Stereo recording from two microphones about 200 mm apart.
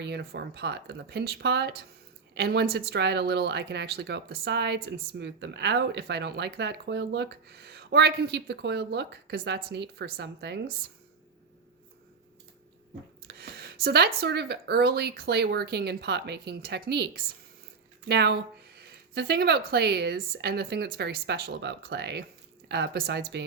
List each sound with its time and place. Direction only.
0.0 s speech: 55° right (ahead or behind)
13.2 s speech: 50° right (ahead or behind)